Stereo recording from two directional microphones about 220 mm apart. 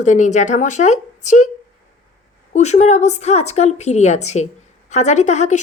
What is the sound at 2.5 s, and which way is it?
A woman's voice, 30° left (ahead or behind).